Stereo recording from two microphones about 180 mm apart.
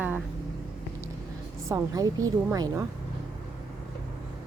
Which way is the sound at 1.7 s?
20° right (ahead or behind).